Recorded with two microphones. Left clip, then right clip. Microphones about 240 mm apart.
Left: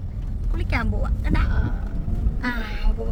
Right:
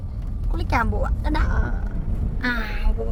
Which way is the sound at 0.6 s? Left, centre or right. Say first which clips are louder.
Right 5 dB; centre.